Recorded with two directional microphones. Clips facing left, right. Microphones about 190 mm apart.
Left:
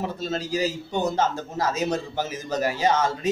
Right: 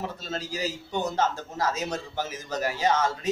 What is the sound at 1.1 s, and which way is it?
A man's voice, 15° left (ahead or behind).